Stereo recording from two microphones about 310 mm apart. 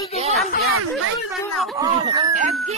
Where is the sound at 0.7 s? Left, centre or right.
Right.